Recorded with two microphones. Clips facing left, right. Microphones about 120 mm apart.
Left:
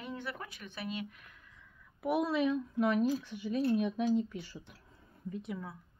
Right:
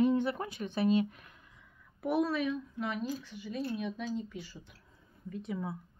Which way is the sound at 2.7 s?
55° left (ahead or behind).